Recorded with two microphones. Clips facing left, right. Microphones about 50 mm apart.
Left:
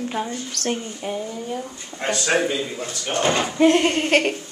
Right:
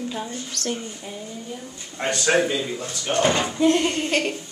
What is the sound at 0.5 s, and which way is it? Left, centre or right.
Speech, left.